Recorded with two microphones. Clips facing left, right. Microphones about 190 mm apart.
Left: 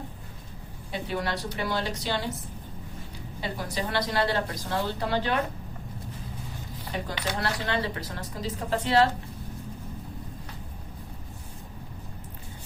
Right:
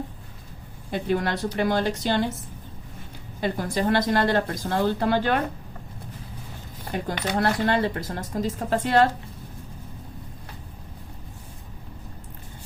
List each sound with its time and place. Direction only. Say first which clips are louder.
0.9 s speech: right 6 dB; 50° right (ahead or behind)
3.4 s speech: right 8 dB; 50° right (ahead or behind)
6.8 s speech: right 4 dB; 50° right (ahead or behind)